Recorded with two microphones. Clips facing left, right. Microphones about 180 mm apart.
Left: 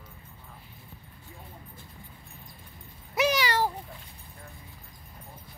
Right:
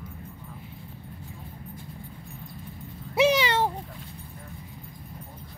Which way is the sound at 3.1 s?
25° right (ahead or behind).